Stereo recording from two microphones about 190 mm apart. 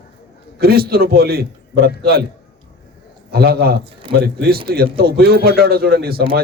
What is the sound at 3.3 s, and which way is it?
A man's voice, 55° right (ahead or behind).